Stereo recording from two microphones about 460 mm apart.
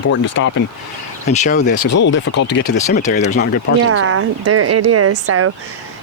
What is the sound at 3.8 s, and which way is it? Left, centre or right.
Speech, right.